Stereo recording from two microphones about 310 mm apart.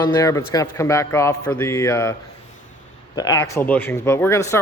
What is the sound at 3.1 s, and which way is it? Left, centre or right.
Speech, centre.